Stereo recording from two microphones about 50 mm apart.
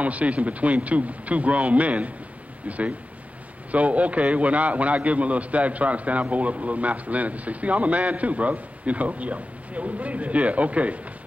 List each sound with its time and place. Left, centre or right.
0.0 s a man's voice: right
3.7 s a man's voice: right